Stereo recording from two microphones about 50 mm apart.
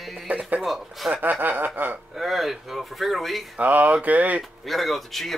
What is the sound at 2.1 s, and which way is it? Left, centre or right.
Speech, centre.